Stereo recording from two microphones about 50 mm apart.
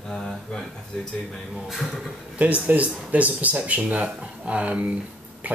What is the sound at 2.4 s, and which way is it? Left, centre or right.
Speech, right.